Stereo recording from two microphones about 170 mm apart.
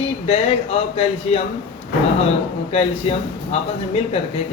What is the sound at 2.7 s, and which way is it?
Speech, 35° left (ahead or behind).